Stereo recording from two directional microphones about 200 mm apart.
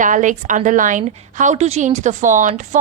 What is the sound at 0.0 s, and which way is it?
A woman's voice, 40° right (ahead or behind).